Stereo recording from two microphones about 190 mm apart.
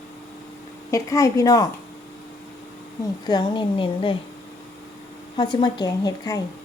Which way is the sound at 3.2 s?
20° left (ahead or behind).